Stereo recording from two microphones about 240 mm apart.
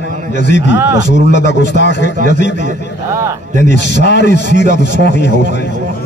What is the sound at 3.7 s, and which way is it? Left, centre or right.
Speech, left.